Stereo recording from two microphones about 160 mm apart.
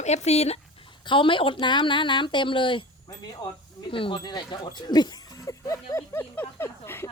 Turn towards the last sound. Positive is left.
turn(degrees=15)  # may be behind; listen again after turning